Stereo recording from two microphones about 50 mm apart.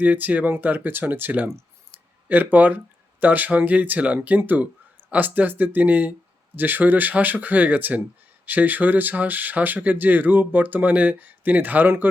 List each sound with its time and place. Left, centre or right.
0.0 s speech: right